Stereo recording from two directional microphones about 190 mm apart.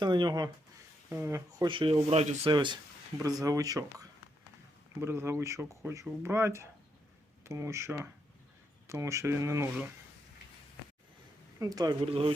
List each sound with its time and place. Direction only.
0.0 s speech: 25° right (ahead or behind)
1.6 s speech: 25° right (ahead or behind)
11.6 s speech: 20° right (ahead or behind)